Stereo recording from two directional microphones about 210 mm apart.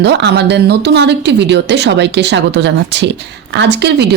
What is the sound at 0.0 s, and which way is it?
A woman's voice, 55° right (ahead or behind).